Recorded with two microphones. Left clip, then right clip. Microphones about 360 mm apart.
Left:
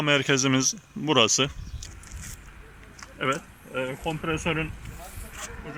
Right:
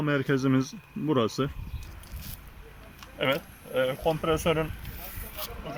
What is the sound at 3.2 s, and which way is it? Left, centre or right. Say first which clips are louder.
Speech: even; right.